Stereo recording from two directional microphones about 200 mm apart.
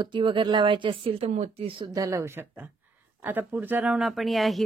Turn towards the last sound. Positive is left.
turn(degrees=0)  # may be behind; listen again after turning